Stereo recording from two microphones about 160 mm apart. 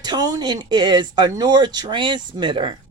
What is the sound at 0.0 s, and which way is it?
Speech, 25° right (ahead or behind).